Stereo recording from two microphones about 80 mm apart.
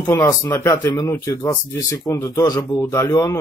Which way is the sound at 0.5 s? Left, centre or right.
Left.